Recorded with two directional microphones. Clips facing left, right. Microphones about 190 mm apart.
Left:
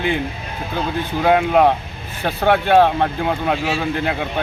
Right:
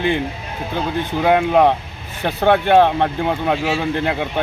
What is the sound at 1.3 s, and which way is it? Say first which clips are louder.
Speech: even; 20° right (ahead or behind).